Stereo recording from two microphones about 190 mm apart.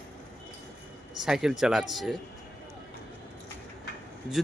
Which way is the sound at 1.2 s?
Centre (ahead or behind).